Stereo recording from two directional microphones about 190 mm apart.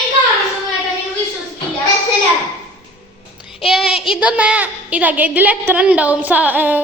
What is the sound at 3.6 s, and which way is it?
A woman's voice, 5° right (ahead or behind).